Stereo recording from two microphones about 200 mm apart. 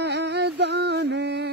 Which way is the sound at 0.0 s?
60° right (ahead or behind).